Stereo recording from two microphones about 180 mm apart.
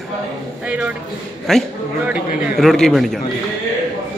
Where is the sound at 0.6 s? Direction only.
5° right (ahead or behind).